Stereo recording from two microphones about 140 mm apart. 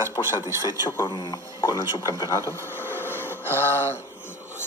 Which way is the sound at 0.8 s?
30° left (ahead or behind).